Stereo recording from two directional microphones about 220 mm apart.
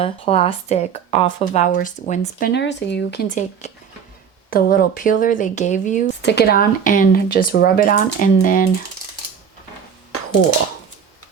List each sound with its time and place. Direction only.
0.0 s speech: 25° left (ahead or behind); by 3.3 s 45° left (ahead or behind)
3.6 s speech: 30° left (ahead or behind)
6.2 s speech: 45° left (ahead or behind)
10.1 s a sound: 90° left